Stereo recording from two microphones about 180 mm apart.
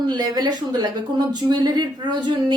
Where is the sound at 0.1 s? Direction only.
25° right (ahead or behind).